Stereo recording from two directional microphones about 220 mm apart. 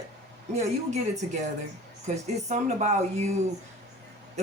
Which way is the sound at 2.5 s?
30° right (ahead or behind).